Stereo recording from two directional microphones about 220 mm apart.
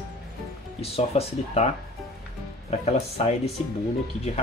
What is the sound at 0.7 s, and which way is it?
Speech, 25° left (ahead or behind).